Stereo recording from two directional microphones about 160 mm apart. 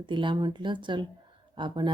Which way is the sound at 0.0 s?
30° right (ahead or behind).